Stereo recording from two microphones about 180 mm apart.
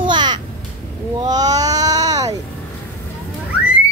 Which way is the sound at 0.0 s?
25° right (ahead or behind).